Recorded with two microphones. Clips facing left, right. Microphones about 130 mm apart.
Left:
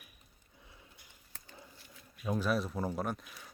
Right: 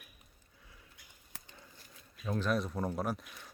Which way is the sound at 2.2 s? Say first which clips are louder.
Left 1 dB; 10° left (ahead or behind).